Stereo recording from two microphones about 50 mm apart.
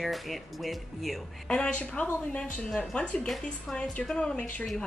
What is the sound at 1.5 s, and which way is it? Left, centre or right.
Speech, left.